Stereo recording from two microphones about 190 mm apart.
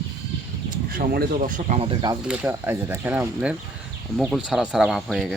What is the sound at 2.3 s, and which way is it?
Speech, 10° right (ahead or behind).